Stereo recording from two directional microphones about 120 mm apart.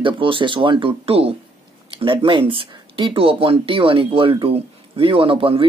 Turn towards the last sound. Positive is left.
turn(degrees=-50)  # may be behind; listen again after turning